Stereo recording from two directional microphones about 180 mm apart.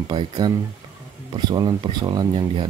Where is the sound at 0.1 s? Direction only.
25° right (ahead or behind).